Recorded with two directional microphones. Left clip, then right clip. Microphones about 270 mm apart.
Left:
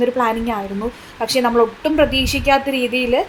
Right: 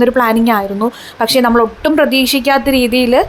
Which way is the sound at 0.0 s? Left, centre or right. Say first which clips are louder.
Right 6 dB; right.